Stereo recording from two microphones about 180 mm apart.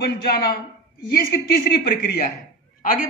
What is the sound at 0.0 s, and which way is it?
Speech, 60° left (ahead or behind).